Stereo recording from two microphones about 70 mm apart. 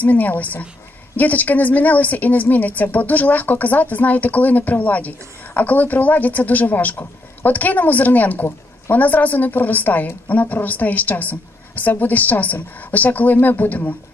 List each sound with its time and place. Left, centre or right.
0.0 s speech: left